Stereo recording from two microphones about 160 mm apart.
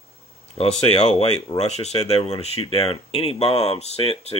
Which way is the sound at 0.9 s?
40° left (ahead or behind).